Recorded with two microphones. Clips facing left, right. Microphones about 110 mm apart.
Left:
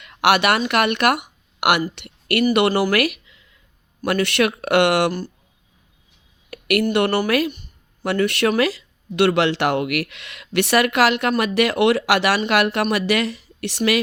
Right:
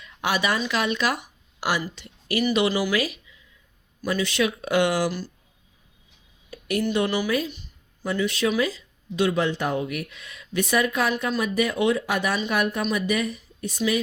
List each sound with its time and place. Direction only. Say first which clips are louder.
0.0 s speech: left 8 dB; 70° left (ahead or behind)
6.5 s a sound: left 6 dB; 70° left (ahead or behind)
6.8 s speech: left 3 dB; 65° left (ahead or behind); by 14.0 s 80° left